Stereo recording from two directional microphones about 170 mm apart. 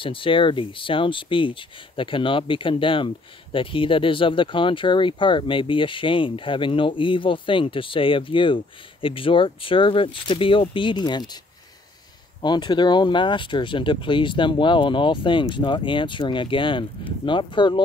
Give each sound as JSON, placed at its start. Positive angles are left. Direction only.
{"t": 0.0, "sound": "speech", "side_deg": 30}
{"t": 12.4, "sound": "speech", "side_deg": 25}